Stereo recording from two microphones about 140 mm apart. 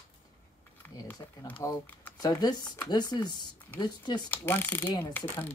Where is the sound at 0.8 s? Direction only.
15° left (ahead or behind).